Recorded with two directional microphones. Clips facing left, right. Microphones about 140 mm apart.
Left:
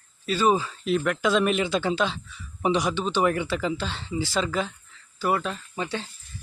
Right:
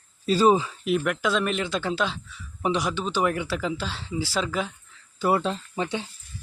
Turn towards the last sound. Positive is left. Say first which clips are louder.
# right 2 dB
turn(degrees=-15)  # may be behind; listen again after turning